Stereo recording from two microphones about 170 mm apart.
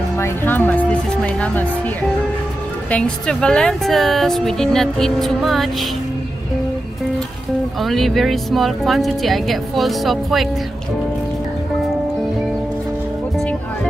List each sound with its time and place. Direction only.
0.2 s speech: 10° left (ahead or behind)
2.9 s speech: 5° left (ahead or behind)
7.8 s speech: centre (ahead or behind)